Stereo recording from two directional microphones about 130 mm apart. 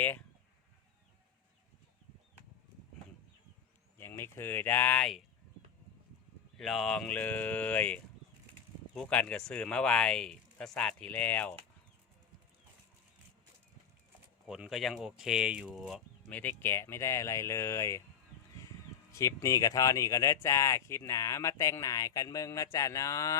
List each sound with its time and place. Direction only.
3.9 s speech: 20° left (ahead or behind)
6.6 s speech: centre (ahead or behind)
14.4 s speech: 5° right (ahead or behind)
16.3 s speech: 15° left (ahead or behind)
19.1 s speech: 25° left (ahead or behind)